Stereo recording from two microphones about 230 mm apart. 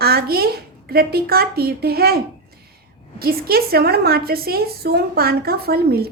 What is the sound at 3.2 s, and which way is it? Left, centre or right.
A woman's voice, right.